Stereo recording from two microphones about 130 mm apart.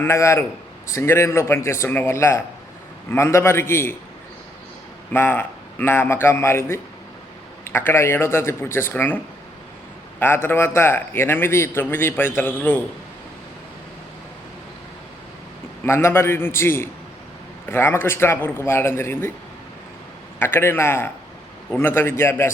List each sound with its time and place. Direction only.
0.0 s a man's voice: 20° left (ahead or behind)
5.1 s a man's voice: 15° left (ahead or behind)
10.2 s a man's voice: 15° left (ahead or behind)
15.8 s a man's voice: 20° left (ahead or behind)
20.4 s a man's voice: 20° left (ahead or behind)